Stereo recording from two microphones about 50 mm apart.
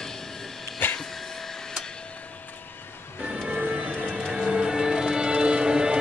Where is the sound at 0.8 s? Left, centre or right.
Left.